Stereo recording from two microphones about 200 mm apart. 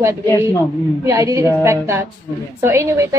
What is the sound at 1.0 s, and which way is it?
A woman's voice, 15° right (ahead or behind).